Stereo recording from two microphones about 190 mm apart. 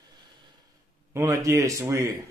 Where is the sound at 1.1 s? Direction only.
15° right (ahead or behind).